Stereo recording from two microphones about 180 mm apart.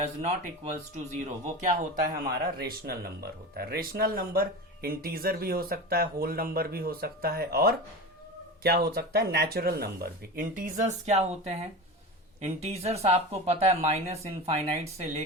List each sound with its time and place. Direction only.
0.2 s speech: 35° right (ahead or behind)
2.6 s speech: 60° right (ahead or behind); by 15.2 s 35° right (ahead or behind)